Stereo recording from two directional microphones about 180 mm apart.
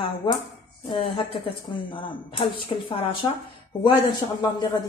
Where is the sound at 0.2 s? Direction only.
25° left (ahead or behind).